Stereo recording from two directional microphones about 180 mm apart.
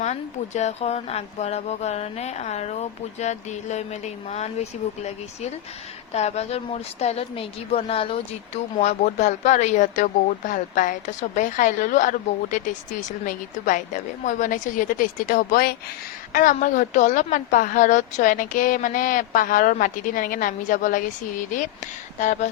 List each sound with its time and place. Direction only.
0.0 s speech: 40° left (ahead or behind)
22.2 s speech: 45° left (ahead or behind)